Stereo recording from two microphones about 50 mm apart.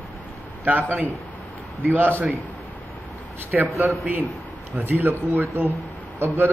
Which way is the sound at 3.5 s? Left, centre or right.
Centre.